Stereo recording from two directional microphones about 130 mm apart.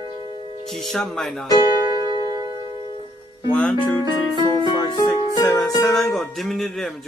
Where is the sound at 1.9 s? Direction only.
30° right (ahead or behind).